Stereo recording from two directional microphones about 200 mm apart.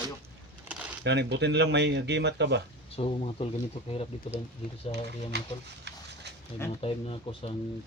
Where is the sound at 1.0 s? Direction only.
60° right (ahead or behind).